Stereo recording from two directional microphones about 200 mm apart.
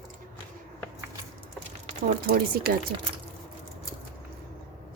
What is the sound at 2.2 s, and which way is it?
Speech, 50° right (ahead or behind).